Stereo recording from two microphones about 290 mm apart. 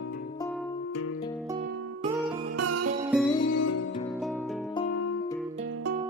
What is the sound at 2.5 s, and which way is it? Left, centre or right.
Music, right.